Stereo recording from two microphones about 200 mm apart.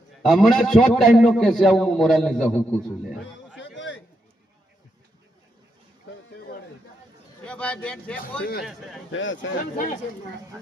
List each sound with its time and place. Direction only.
0.3 s a man's voice: centre (ahead or behind)
3.8 s a sound: 65° left (ahead or behind)
7.4 s a man's voice: 5° left (ahead or behind)
9.1 s speech: 70° left (ahead or behind)
9.7 s speech: 40° left (ahead or behind)